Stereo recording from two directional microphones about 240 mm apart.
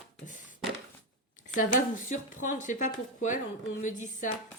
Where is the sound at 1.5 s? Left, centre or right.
Left.